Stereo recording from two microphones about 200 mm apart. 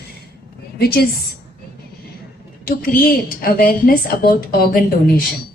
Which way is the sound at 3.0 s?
45° left (ahead or behind).